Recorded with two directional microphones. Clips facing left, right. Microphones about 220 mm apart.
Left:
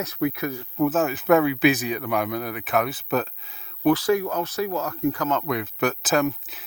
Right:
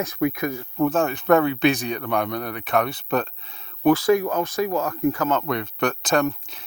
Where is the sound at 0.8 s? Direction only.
5° left (ahead or behind).